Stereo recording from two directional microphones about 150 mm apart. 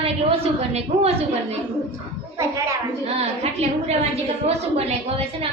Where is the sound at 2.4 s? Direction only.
20° right (ahead or behind).